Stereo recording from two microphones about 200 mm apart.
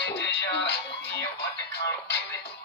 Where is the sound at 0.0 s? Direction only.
60° left (ahead or behind).